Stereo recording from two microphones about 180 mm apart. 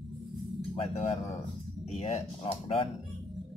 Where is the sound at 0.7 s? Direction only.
35° left (ahead or behind).